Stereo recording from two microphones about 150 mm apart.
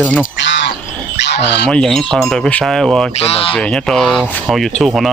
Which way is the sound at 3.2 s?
40° left (ahead or behind).